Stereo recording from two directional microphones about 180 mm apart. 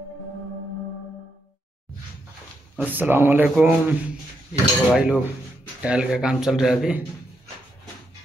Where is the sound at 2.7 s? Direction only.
10° right (ahead or behind).